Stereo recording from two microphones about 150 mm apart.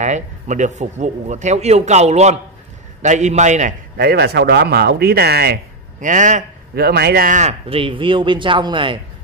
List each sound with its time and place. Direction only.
0.0 s a man's voice: 55° right (ahead or behind)
3.9 s speech: 90° right; by 6.4 s 55° right (ahead or behind)
6.7 s speech: 90° right; by 7.5 s 55° right (ahead or behind)
7.6 s speech: 40° right (ahead or behind)